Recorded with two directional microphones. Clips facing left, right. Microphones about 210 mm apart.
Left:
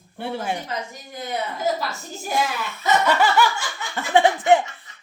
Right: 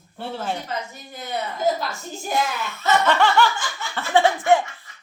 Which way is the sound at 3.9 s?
15° left (ahead or behind).